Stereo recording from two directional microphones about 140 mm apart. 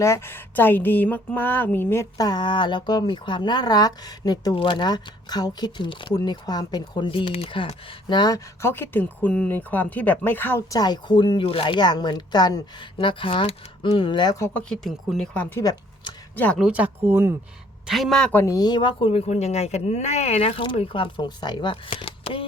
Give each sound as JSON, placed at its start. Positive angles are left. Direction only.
{"t": 0.0, "sound": "speech", "side_deg": 20}
{"t": 8.6, "sound": "speech", "side_deg": 15}
{"t": 10.8, "sound": "speech", "side_deg": 30}
{"t": 14.4, "sound": "speech", "side_deg": 5}
{"t": 16.6, "sound": "speech", "side_deg": -10}
{"t": 17.8, "sound": "speech", "side_deg": 0}
{"t": 18.5, "sound": "speech", "side_deg": 30}